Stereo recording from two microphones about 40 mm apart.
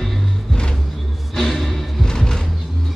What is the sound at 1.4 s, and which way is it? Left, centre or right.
Music, centre.